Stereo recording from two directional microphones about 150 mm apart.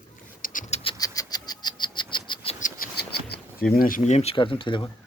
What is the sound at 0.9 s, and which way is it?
Bird, 25° left (ahead or behind).